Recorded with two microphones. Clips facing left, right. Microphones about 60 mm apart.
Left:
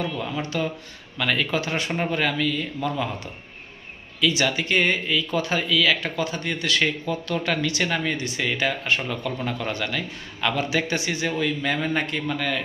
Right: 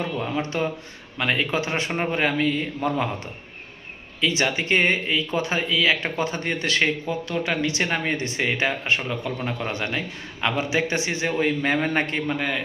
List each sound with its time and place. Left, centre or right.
0.0 s a man's voice: right
4.2 s speech: right
7.4 s a man's voice: centre